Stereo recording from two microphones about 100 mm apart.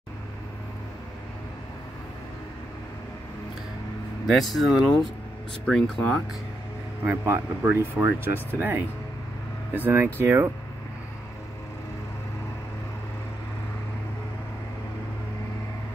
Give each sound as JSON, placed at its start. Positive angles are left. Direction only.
{"t": 4.3, "sound": "speech", "side_deg": 0}
{"t": 7.1, "sound": "speech", "side_deg": -20}